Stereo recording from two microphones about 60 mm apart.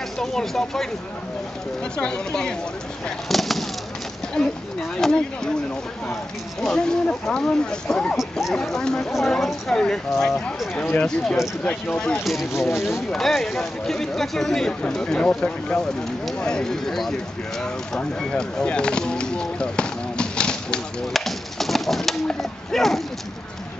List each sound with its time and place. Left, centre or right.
0.2 s speech: centre
2.0 s speech: centre
3.3 s speech: centre
6.6 s speech: centre
8.2 s speech: centre
8.5 s speech: centre
11.6 s speech: left
12.3 s speech: centre
17.9 s a sound: centre
21.1 s pigeon: centre